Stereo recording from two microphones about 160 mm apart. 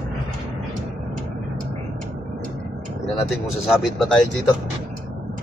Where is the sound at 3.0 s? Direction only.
Centre (ahead or behind).